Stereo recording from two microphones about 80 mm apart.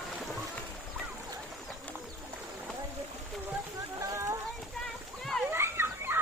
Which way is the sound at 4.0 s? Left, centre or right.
Right.